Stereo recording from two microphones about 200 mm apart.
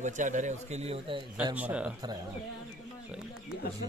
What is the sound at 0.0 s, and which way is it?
A man's voice, 40° right (ahead or behind).